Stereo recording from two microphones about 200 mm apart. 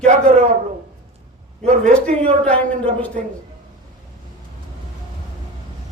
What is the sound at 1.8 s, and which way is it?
A man's voice, 5° left (ahead or behind).